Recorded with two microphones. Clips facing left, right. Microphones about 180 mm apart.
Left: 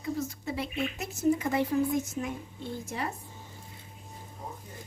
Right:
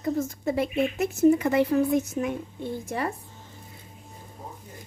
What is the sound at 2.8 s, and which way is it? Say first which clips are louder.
Speech: right 5 dB; 55° right (ahead or behind).